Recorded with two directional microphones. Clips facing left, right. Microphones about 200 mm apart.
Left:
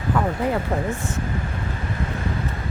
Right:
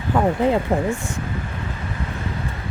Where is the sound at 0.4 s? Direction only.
20° right (ahead or behind).